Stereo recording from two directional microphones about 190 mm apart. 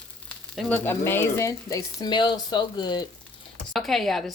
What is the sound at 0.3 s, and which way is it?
Speech, 5° left (ahead or behind).